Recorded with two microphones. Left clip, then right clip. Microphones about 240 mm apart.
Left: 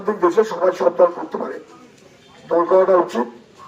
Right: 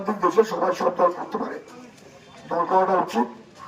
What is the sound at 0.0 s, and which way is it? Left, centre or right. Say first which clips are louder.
Speech: left 3 dB; centre.